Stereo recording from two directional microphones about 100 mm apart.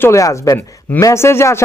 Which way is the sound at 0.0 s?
30° left (ahead or behind).